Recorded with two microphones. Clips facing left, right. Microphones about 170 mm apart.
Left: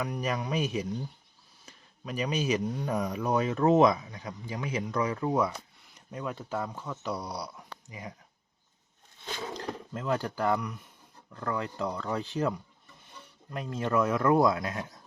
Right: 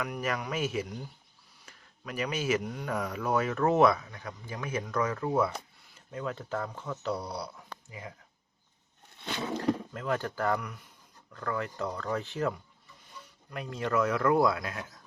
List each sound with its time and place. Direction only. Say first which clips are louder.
0.0 s speech: left 1 dB; 20° left (ahead or behind)
9.9 s speech: left 1 dB; 20° left (ahead or behind)